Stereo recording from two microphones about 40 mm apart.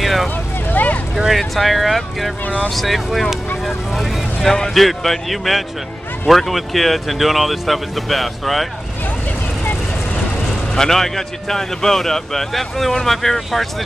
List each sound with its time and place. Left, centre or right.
0.0 s vehicle: centre
0.7 s vehicle: left
1.3 s speech: centre
2.4 s speech: left
2.7 s speech: centre
10.7 s speech: centre